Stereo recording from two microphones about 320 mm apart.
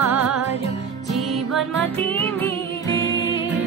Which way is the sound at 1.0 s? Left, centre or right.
Centre.